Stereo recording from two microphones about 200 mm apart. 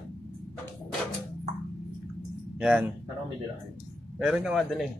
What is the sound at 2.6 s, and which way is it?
Speech, 5° right (ahead or behind).